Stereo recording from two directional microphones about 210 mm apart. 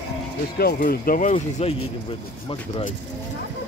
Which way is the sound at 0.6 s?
45° left (ahead or behind).